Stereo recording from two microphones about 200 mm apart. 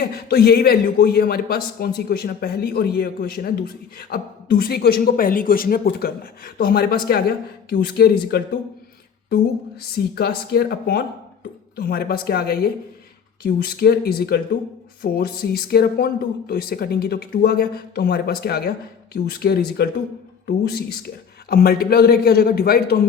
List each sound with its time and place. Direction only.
0.0 s a woman's voice: 50° left (ahead or behind)
9.9 s a woman's voice: 50° left (ahead or behind)
21.5 s a woman's voice: 50° left (ahead or behind)